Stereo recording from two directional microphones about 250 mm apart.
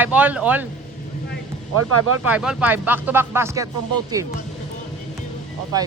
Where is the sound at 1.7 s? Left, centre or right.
Right.